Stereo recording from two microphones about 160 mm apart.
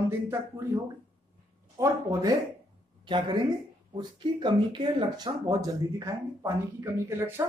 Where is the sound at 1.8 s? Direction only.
25° right (ahead or behind).